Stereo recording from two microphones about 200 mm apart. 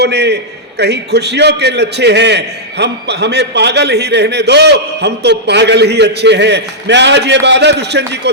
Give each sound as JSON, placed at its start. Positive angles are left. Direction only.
{"t": 0.0, "sound": "a man's voice", "side_deg": -55}